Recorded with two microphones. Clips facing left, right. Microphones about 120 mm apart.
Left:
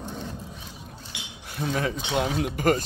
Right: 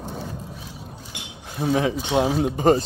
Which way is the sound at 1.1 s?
50° right (ahead or behind).